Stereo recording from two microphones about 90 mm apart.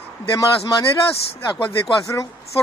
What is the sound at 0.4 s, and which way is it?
Speech, 40° left (ahead or behind).